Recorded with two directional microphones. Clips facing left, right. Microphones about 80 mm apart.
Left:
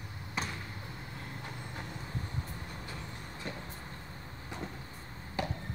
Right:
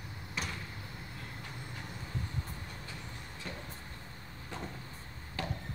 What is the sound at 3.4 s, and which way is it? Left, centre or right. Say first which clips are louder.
Vehicle: left 2 dB; left.